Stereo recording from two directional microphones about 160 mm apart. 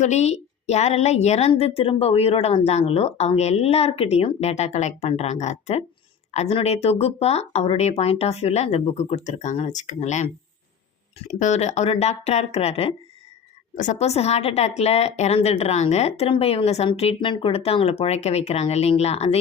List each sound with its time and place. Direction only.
0.0 s a woman's voice: 45° left (ahead or behind)